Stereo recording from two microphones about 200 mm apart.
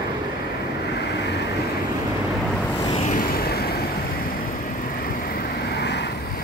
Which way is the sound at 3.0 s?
45° left (ahead or behind).